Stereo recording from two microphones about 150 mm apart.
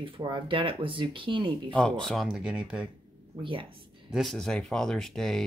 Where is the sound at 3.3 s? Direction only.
35° right (ahead or behind).